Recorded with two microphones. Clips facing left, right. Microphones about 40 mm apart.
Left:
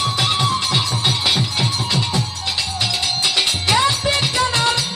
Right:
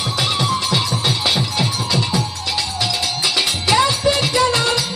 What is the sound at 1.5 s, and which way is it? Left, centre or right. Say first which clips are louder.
Music: right 1 dB; left.